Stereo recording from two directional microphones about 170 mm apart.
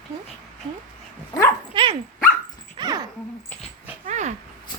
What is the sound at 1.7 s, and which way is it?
Dog, 30° right (ahead or behind).